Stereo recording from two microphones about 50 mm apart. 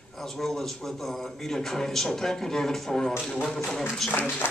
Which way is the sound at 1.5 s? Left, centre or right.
Centre.